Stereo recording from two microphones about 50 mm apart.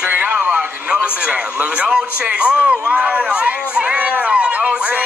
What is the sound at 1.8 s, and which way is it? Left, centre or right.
Speech, centre.